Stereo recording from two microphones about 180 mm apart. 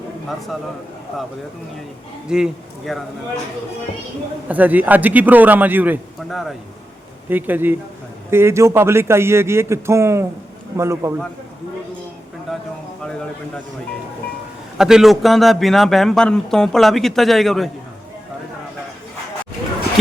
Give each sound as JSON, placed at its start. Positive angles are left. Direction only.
{"t": 2.3, "sound": "speech", "side_deg": 0}
{"t": 4.4, "sound": "a man's voice", "side_deg": -10}
{"t": 12.5, "sound": "a sound", "side_deg": 0}
{"t": 14.8, "sound": "speech", "side_deg": -5}